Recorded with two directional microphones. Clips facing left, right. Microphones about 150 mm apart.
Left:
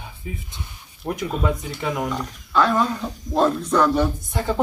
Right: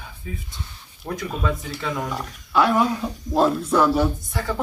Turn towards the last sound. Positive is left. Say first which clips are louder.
# left 3 dB
turn(degrees=20)  # may be behind; listen again after turning